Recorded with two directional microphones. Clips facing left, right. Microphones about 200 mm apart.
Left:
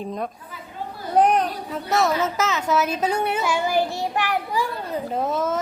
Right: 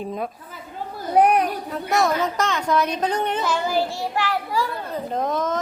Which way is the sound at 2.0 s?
5° left (ahead or behind).